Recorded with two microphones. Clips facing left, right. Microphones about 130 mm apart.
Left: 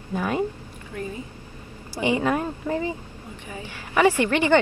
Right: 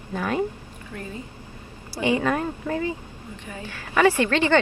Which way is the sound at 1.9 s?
15° left (ahead or behind).